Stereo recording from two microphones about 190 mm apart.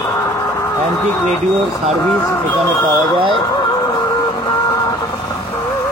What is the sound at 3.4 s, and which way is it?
Music, 20° left (ahead or behind).